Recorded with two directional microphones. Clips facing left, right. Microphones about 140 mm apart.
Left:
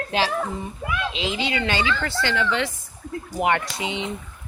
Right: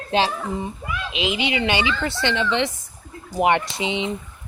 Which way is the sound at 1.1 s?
20° right (ahead or behind).